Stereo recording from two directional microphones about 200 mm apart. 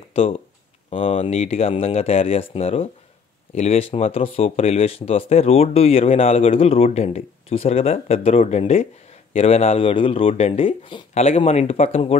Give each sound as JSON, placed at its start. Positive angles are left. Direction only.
{"t": 0.1, "sound": "speech", "side_deg": 30}